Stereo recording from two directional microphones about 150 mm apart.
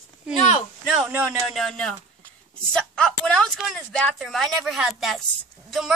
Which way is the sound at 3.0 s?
5° left (ahead or behind).